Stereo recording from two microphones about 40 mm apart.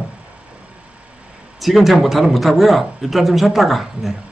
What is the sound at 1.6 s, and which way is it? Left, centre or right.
Speech, centre.